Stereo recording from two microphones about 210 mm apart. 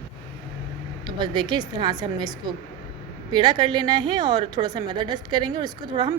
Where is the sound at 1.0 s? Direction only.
20° right (ahead or behind).